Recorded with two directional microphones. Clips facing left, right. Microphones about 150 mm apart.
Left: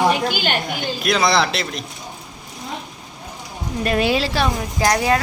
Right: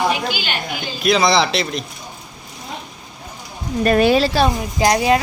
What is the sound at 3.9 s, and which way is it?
Speech, 50° right (ahead or behind).